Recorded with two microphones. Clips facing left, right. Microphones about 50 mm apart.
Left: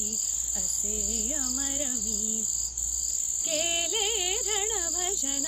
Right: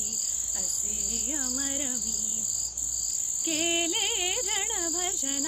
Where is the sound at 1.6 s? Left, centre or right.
Right.